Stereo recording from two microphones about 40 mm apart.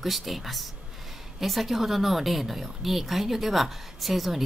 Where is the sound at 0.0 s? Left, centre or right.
Centre.